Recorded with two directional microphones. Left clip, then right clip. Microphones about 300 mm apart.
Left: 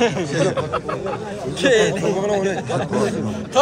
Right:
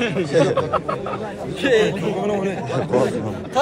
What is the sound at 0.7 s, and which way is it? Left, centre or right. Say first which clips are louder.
Speech: right 1 dB; centre.